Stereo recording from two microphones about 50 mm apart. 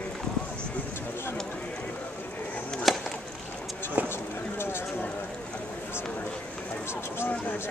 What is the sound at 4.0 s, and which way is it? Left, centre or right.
Clip-clop, right.